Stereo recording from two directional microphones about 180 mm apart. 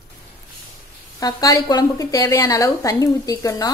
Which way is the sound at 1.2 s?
20° left (ahead or behind).